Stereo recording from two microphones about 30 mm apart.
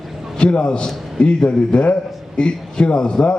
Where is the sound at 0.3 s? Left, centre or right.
Left.